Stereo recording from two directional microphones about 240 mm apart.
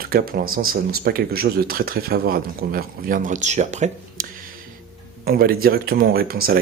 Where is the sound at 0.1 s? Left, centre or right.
Right.